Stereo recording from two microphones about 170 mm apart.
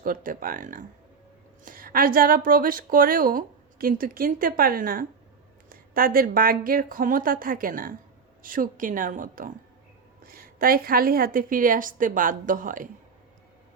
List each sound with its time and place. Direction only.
0.0 s a woman's voice: 55° right (ahead or behind)